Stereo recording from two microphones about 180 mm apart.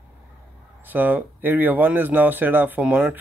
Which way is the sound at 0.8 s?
10° right (ahead or behind).